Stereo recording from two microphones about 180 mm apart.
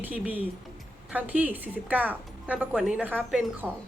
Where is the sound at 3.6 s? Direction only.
5° left (ahead or behind).